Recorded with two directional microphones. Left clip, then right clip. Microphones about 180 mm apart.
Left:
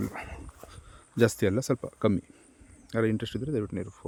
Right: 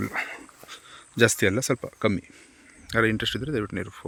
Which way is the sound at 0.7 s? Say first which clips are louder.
Right 4 dB; 10° left (ahead or behind).